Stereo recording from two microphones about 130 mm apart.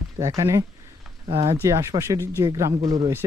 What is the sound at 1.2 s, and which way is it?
Speech, 45° right (ahead or behind).